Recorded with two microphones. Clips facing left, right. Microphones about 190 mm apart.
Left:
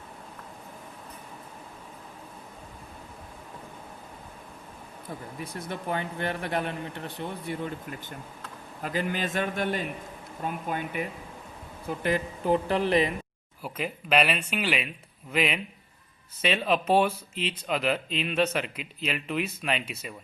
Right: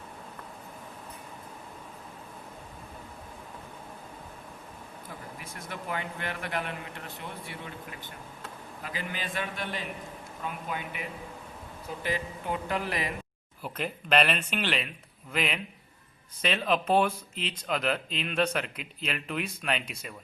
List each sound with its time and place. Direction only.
5.4 s a man's voice: 35° left (ahead or behind)
12.5 s speech: 30° left (ahead or behind)
13.6 s speech: 5° left (ahead or behind)